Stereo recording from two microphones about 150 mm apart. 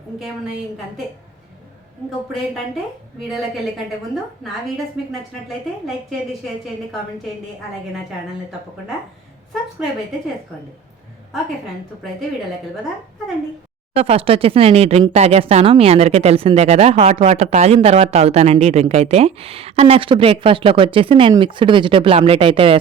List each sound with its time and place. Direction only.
3.2 s a woman's voice: centre (ahead or behind)
5.8 s a woman's voice: centre (ahead or behind)
13.9 s speech: 40° right (ahead or behind)